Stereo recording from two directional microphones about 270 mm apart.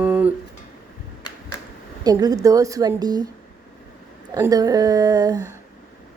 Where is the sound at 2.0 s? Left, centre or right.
Centre.